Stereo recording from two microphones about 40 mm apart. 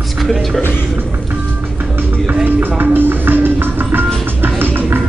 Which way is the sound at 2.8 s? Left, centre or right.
Right.